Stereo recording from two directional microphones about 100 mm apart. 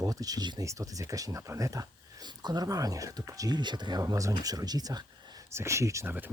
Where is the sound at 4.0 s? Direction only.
35° right (ahead or behind).